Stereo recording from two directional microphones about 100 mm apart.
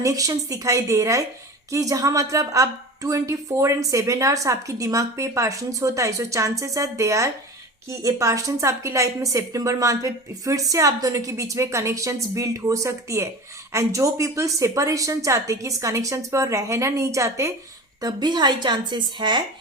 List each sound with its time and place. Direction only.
0.0 s a woman's voice: 35° right (ahead or behind)
18.0 s speech: 45° right (ahead or behind)